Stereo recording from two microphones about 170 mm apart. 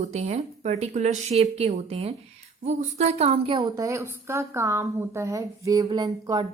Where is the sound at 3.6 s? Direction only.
20° right (ahead or behind).